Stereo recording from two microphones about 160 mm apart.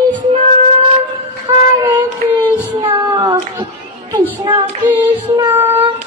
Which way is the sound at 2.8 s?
25° right (ahead or behind).